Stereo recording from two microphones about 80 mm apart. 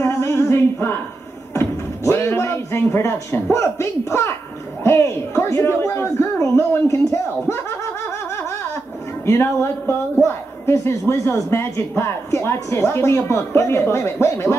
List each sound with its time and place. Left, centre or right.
0.0 s a sound: left
4.8 s a man's voice: left
9.2 s a man's voice: left